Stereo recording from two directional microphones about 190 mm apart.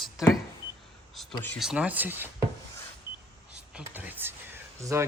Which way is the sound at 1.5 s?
5° right (ahead or behind).